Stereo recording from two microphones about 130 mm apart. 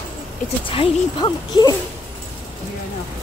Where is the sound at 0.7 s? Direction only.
40° left (ahead or behind).